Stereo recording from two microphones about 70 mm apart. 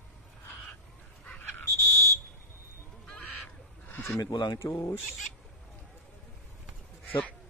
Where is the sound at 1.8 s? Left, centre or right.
Right.